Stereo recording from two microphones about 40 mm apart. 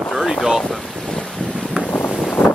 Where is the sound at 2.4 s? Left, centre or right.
Left.